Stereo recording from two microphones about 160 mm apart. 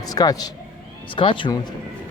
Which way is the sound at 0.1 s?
25° left (ahead or behind).